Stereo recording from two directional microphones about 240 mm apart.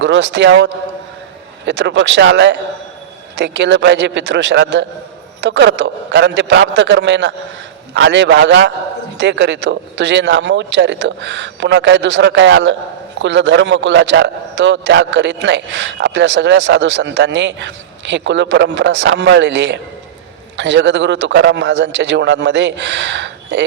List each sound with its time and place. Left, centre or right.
0.0 s a man's voice: right